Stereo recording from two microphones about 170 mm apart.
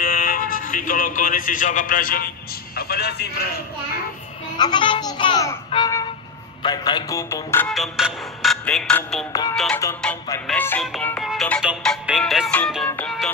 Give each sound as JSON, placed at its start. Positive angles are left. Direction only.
{"t": 0.0, "sound": "speech", "side_deg": 55}
{"t": 4.6, "sound": "a child's voice", "side_deg": 25}
{"t": 6.6, "sound": "a child's voice", "side_deg": 25}
{"t": 7.6, "sound": "music", "side_deg": 0}
{"t": 9.3, "sound": "a child's voice", "side_deg": 20}
{"t": 10.0, "sound": "music", "side_deg": 5}